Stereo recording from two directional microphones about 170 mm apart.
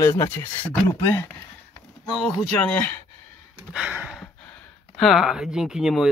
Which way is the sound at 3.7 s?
10° right (ahead or behind).